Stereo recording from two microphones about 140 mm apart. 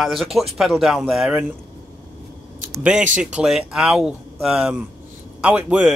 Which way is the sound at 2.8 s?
10° right (ahead or behind).